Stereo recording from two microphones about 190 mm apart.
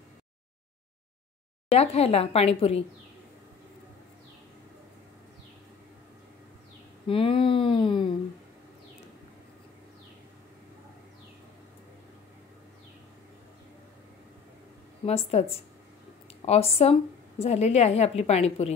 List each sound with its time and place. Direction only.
1.7 s a woman's voice: 35° left (ahead or behind)
7.1 s speech: 30° left (ahead or behind)
15.0 s a woman's voice: 35° left (ahead or behind)